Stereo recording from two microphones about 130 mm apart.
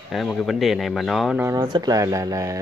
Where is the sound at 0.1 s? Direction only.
Centre (ahead or behind).